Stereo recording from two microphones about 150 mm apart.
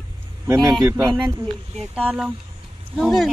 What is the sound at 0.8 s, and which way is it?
Speech, 20° right (ahead or behind).